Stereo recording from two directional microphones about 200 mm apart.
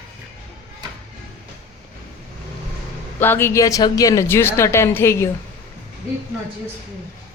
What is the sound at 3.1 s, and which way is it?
Speech, 10° left (ahead or behind).